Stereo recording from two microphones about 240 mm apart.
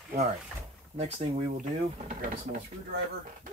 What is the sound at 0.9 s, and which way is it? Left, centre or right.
Speech, right.